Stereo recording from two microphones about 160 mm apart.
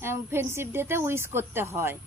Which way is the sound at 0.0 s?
15° right (ahead or behind).